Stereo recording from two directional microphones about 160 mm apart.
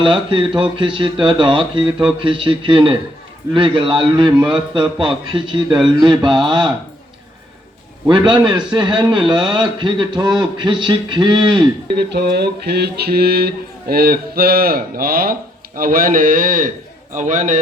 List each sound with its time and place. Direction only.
0.0 s a man's voice: 30° right (ahead or behind)
8.0 s a man's voice: 30° right (ahead or behind)
11.9 s a sound: 90° right; by 16.7 s 55° right (ahead or behind)
17.2 s a man's voice: 50° right (ahead or behind)